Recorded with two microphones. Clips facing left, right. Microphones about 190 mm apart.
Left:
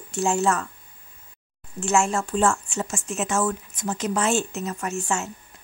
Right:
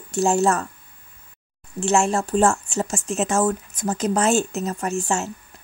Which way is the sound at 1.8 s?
35° right (ahead or behind).